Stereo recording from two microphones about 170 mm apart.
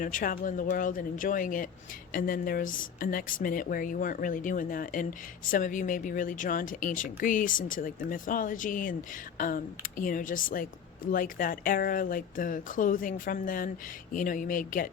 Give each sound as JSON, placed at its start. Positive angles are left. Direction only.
{"t": 0.0, "sound": "speech", "side_deg": 50}